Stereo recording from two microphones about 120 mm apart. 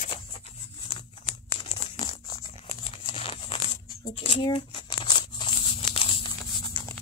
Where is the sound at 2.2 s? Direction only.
35° left (ahead or behind).